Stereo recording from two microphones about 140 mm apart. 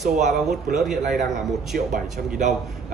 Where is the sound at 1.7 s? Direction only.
75° right (ahead or behind).